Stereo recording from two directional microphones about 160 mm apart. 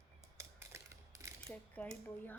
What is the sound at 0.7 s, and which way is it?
Mechanisms, 20° right (ahead or behind).